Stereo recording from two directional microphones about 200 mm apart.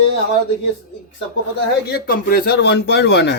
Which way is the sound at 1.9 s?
50° left (ahead or behind).